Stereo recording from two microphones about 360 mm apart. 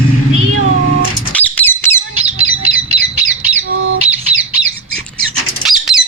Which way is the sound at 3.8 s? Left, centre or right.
Right.